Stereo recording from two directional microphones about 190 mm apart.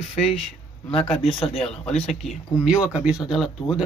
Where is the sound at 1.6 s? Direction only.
5° left (ahead or behind).